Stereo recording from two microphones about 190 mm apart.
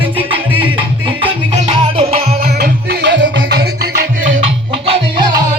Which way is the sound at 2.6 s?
60° right (ahead or behind).